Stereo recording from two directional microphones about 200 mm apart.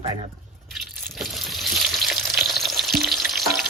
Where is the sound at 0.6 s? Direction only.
Centre (ahead or behind).